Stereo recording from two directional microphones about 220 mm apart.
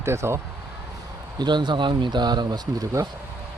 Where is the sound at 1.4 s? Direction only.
20° right (ahead or behind).